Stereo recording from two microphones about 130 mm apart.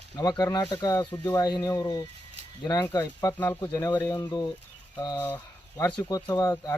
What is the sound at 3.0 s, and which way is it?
Speech, 20° left (ahead or behind).